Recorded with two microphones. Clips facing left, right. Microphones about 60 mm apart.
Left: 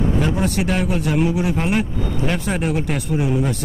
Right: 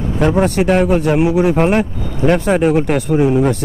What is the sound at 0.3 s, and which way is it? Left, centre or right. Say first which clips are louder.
A man's voice: right 7 dB; right.